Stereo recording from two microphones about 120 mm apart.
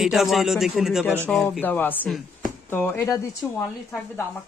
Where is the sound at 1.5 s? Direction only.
15° left (ahead or behind).